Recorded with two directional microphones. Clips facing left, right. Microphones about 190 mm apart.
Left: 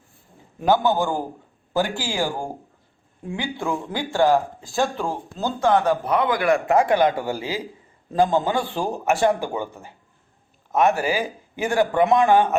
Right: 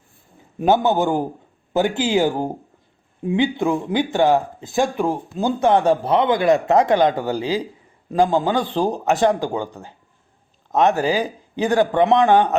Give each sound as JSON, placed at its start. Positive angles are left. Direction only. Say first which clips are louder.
{"t": 0.6, "sound": "speech", "louder": "right 3 dB", "side_deg": -20}